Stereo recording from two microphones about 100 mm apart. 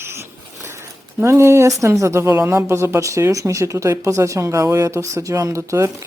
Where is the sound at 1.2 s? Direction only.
30° right (ahead or behind).